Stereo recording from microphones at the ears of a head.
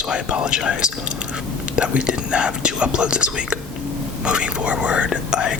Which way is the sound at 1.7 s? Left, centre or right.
Left.